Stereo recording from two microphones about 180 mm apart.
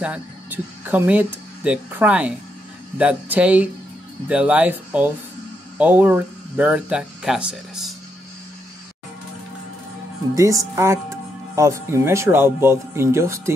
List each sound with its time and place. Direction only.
0.0 s speech: 10° right (ahead or behind)
10.3 s speech: 20° right (ahead or behind)